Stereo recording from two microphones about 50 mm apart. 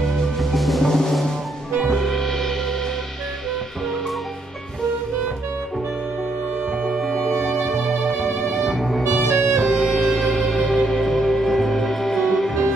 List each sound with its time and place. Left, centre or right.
0.0 s music: centre
6.8 s music: centre
7.5 s music: centre
9.3 s music: right
9.8 s music: centre